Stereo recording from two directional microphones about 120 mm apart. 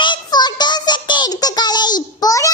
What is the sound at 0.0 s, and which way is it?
Child singing, 40° left (ahead or behind).